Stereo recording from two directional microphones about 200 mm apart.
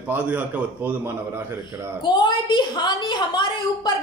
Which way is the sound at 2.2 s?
25° left (ahead or behind).